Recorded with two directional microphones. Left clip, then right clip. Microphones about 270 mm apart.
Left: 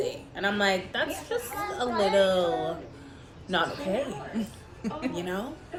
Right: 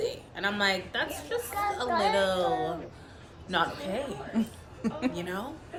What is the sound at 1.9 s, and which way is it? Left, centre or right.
Speech, right.